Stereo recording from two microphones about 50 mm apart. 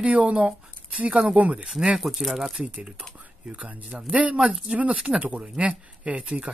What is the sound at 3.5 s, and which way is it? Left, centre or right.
Speech, right.